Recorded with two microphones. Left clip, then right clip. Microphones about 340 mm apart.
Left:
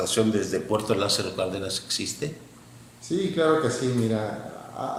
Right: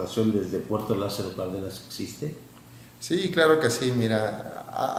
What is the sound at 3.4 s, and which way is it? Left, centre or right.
Speech, right.